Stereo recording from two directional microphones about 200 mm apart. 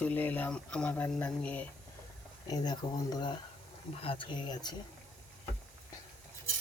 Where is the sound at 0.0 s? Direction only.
10° left (ahead or behind).